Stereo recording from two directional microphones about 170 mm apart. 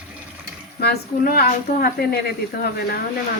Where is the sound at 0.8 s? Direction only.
70° left (ahead or behind).